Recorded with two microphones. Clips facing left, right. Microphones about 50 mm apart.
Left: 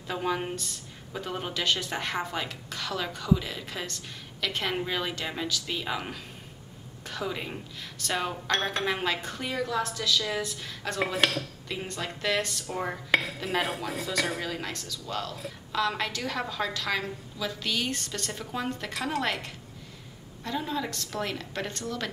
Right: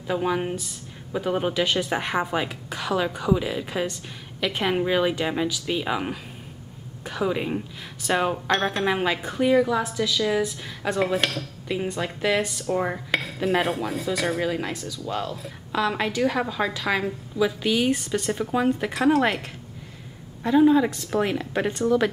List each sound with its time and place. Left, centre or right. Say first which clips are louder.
0.0 s dishes: right 5 dB; centre
11.1 s speech: right 1 dB; centre
11.6 s dishes: right 7 dB; centre
13.1 s dishes: right 2 dB; centre
20.4 s dishes: right 14 dB; centre